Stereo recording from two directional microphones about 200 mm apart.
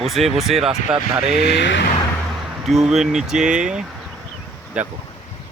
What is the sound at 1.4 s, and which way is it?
Speech, 60° left (ahead or behind).